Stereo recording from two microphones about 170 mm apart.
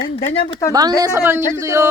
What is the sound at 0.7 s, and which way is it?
Speech, 20° right (ahead or behind).